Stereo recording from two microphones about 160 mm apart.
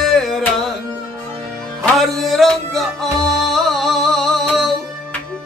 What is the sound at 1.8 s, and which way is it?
Music, centre (ahead or behind).